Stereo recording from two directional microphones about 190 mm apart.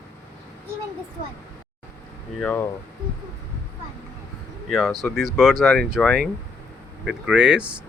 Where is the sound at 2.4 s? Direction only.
10° left (ahead or behind).